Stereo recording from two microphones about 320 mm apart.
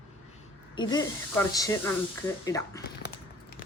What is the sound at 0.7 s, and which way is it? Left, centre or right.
Speech, centre.